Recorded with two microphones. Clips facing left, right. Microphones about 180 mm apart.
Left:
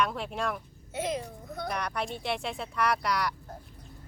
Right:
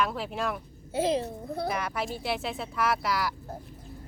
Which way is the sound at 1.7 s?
5° right (ahead or behind).